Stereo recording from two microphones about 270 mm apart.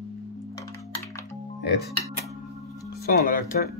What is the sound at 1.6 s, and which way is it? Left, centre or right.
Speech, left.